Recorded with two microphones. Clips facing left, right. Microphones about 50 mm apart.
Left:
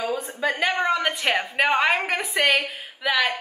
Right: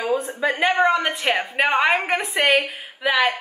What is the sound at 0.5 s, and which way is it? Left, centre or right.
Speech, right.